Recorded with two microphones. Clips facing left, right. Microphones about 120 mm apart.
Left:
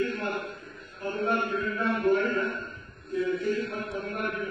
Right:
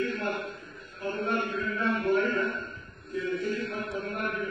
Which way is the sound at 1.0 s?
30° left (ahead or behind).